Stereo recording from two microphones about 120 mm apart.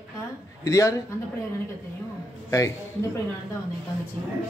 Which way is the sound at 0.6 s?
25° left (ahead or behind).